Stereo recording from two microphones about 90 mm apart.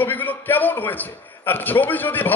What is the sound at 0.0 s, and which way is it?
A man's voice, 20° left (ahead or behind).